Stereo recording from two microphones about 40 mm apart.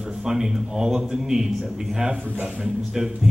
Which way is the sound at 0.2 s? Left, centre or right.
Centre.